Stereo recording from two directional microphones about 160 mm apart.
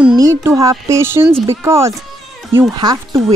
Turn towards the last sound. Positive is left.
turn(degrees=-25)  # may be behind; listen again after turning